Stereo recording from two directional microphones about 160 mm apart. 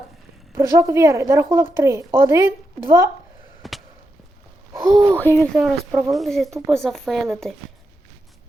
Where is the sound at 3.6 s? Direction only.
Centre (ahead or behind).